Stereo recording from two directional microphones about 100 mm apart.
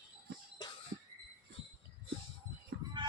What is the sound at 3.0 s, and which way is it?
Music, 50° right (ahead or behind).